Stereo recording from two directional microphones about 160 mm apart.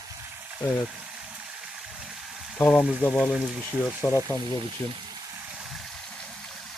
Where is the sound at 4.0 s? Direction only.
15° left (ahead or behind).